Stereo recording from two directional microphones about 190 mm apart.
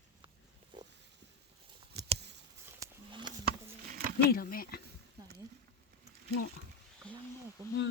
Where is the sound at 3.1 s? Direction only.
25° right (ahead or behind).